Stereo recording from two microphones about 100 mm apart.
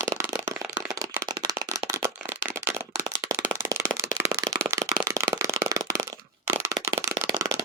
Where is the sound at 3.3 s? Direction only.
30° right (ahead or behind).